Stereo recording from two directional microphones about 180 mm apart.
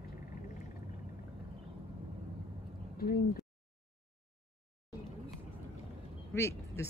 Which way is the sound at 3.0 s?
55° left (ahead or behind).